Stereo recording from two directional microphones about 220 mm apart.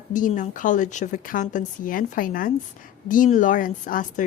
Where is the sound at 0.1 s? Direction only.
35° left (ahead or behind).